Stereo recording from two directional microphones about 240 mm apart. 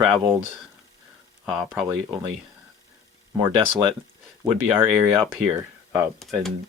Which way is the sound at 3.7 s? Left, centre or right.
Centre.